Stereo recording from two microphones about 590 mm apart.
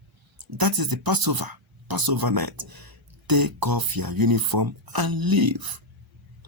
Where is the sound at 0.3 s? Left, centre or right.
Right.